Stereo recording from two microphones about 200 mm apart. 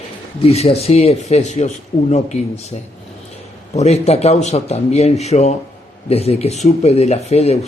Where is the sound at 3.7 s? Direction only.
30° left (ahead or behind).